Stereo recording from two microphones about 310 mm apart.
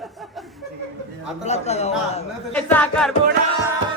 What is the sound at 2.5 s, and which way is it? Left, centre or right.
Speech, centre.